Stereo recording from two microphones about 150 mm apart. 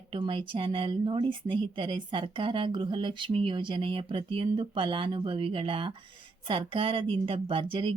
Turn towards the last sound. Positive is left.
turn(degrees=-35)  # may be behind; listen again after turning